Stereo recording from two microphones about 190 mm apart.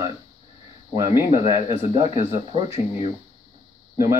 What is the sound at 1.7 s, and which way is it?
Speech, 35° right (ahead or behind).